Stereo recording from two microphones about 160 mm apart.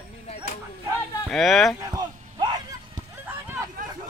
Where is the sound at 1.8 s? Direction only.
25° right (ahead or behind).